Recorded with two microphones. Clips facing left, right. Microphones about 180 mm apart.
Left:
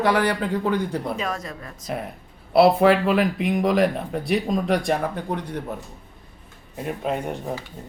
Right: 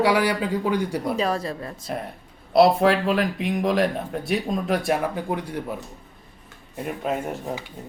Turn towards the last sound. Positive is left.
turn(degrees=-5)  # may be behind; listen again after turning